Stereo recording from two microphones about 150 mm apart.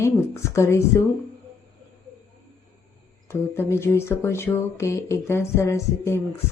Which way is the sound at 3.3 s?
15° left (ahead or behind).